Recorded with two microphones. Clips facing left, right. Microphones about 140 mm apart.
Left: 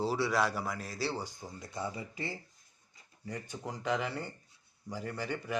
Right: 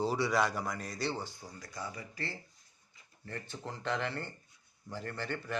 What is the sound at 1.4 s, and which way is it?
Speech, 25° left (ahead or behind).